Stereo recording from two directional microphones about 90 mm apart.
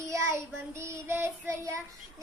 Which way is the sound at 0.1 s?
35° right (ahead or behind).